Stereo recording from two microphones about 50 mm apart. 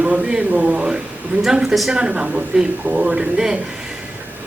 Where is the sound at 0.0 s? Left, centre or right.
Right.